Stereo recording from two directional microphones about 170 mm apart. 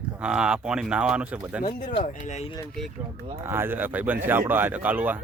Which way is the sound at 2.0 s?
45° left (ahead or behind).